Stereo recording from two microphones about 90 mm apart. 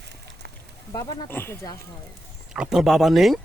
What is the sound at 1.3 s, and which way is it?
Speech, 25° left (ahead or behind).